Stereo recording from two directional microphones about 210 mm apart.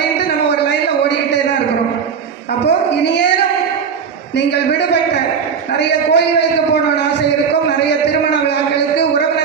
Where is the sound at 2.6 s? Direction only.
55° left (ahead or behind).